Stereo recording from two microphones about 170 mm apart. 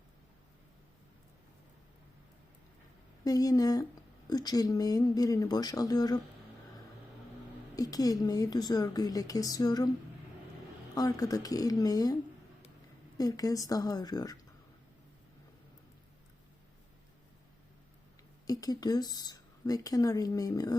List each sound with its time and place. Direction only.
3.2 s speech: 20° left (ahead or behind)
7.8 s speech: 20° left (ahead or behind)
10.9 s speech: 20° left (ahead or behind)
13.1 s speech: 20° left (ahead or behind)
18.4 s speech: 20° left (ahead or behind)